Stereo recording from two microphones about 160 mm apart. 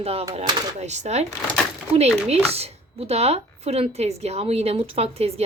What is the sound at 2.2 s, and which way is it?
Speech, 40° right (ahead or behind).